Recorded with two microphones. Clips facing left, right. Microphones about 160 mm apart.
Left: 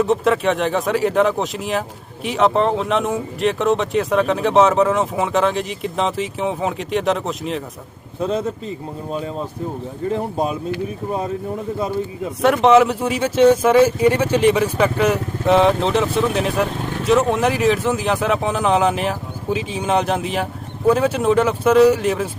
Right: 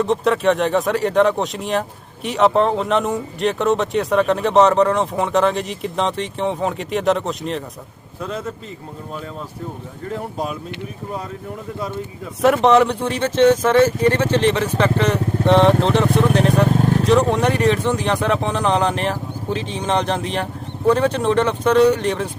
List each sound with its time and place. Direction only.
0.0 s speech: centre (ahead or behind)
8.2 s speech: 20° left (ahead or behind)
10.1 s speech: 20° left (ahead or behind)
12.6 s speech: centre (ahead or behind)